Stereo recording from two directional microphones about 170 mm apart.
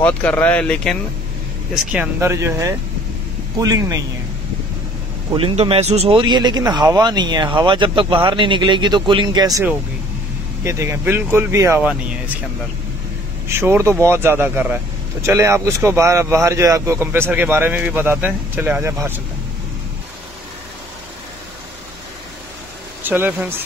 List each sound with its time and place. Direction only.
0.0 s speech: 10° left (ahead or behind)
1.8 s speech: 10° right (ahead or behind)
5.3 s speech: 30° right (ahead or behind); by 11.9 s 15° right (ahead or behind)
13.5 s speech: 15° right (ahead or behind)
23.0 s speech: 10° right (ahead or behind)